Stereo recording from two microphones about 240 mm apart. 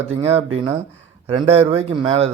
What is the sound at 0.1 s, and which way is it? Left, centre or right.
Speech, right.